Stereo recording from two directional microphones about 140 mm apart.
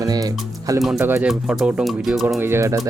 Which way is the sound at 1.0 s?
15° right (ahead or behind).